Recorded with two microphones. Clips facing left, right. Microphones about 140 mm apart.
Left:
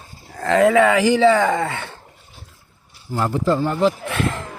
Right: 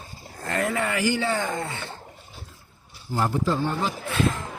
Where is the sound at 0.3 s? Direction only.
90° left.